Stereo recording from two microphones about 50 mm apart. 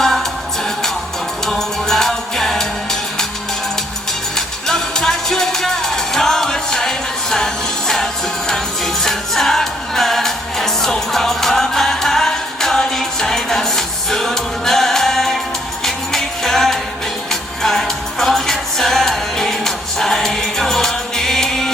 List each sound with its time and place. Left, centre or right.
0.0 s music: centre
1.5 s music: centre
4.4 s music: centre